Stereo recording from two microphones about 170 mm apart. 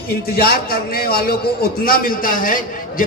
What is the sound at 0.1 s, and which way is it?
A man's voice, 65° left (ahead or behind).